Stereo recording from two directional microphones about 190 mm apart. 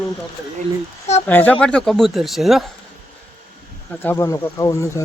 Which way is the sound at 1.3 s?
10° left (ahead or behind).